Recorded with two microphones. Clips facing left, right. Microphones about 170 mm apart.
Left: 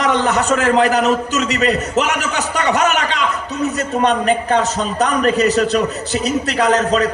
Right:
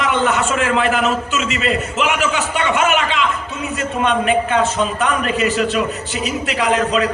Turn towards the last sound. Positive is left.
turn(degrees=40)  # may be behind; listen again after turning